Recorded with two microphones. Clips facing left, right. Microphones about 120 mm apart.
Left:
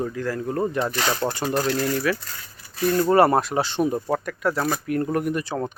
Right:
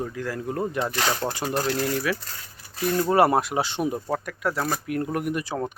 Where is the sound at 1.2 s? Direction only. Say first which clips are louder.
Left 3 dB; 15° left (ahead or behind).